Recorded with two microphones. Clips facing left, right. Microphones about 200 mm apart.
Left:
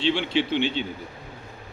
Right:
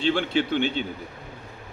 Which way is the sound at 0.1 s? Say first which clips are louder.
Right 1 dB; 50° right (ahead or behind).